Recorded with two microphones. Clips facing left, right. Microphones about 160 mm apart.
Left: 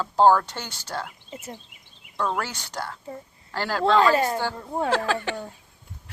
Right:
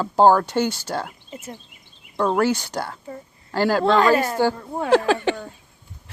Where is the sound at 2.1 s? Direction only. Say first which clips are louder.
Right 6 dB; 25° right (ahead or behind).